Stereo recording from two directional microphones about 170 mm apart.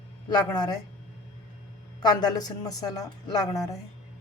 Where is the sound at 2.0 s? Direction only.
25° left (ahead or behind).